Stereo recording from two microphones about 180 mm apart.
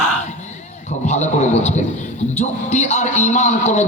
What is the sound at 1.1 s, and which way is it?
A man's voice, 40° left (ahead or behind).